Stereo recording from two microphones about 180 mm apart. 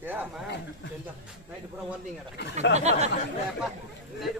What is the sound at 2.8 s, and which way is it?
Speech, 40° right (ahead or behind).